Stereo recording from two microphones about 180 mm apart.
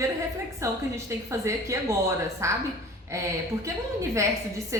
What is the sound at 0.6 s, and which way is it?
A woman's voice, 15° right (ahead or behind).